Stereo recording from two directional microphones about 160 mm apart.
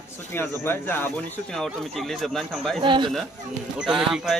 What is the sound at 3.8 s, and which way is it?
Speech, 5° right (ahead or behind).